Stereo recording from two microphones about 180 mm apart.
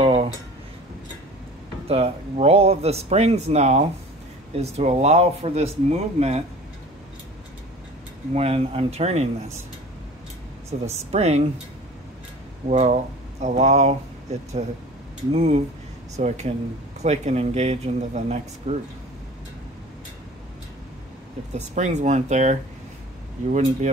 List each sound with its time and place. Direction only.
0.0 s a sound: 35° right (ahead or behind)
1.9 s speech: 35° right (ahead or behind)
8.4 s speech: 35° right (ahead or behind)
10.7 s speech: 35° right (ahead or behind)
12.6 s speech: 40° right (ahead or behind)
21.5 s speech: 40° right (ahead or behind)